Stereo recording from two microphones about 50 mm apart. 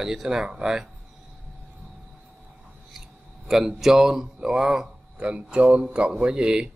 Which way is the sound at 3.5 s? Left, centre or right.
Centre.